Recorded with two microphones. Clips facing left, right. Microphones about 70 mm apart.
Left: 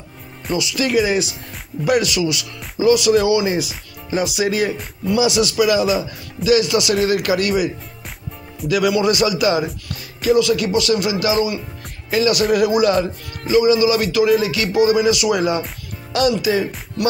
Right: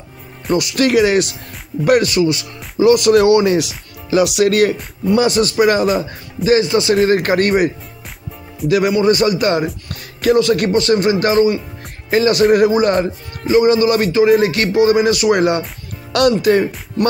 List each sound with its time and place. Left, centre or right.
0.6 s speech: right
1.9 s speech: right
2.8 s speech: right
5.1 s speech: right